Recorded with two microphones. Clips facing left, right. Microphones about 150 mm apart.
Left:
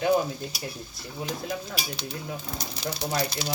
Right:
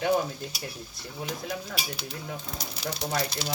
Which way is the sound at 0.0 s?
5° left (ahead or behind).